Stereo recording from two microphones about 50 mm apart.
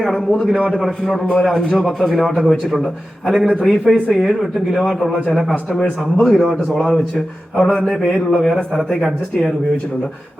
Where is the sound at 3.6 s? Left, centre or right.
Centre.